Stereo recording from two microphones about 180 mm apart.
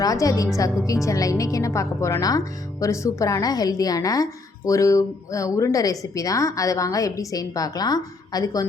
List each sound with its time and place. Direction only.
0.0 s a woman's voice: 20° left (ahead or behind)